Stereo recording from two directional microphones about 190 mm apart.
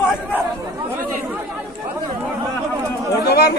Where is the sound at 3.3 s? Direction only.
55° left (ahead or behind).